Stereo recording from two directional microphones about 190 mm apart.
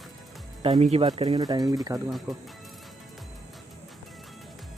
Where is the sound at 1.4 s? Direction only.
20° right (ahead or behind).